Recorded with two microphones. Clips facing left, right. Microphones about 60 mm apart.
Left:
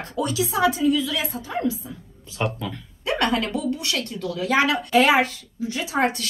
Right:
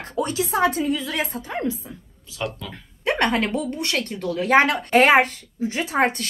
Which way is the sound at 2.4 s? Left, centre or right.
Left.